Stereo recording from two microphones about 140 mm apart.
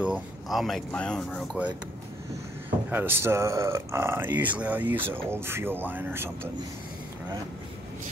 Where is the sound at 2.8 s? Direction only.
15° right (ahead or behind).